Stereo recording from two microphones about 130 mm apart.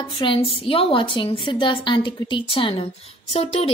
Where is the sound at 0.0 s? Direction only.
40° left (ahead or behind).